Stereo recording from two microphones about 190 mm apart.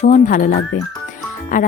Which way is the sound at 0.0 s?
45° left (ahead or behind).